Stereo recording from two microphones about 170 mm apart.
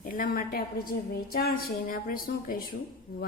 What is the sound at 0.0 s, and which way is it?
A woman's voice, 55° left (ahead or behind).